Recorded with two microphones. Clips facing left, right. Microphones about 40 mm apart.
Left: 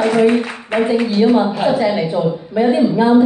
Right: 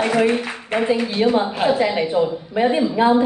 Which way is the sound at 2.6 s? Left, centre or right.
Right.